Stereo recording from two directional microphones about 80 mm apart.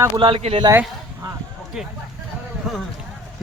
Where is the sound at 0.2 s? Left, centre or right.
Right.